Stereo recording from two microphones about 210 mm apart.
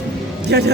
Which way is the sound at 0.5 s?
55° right (ahead or behind).